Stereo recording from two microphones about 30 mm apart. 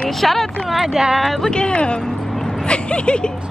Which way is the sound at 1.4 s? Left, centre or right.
Left.